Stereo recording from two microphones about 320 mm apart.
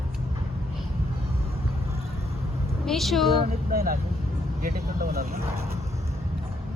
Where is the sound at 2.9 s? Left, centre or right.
Centre.